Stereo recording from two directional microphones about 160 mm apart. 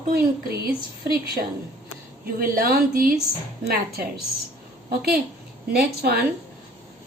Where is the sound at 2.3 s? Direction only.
65° right (ahead or behind).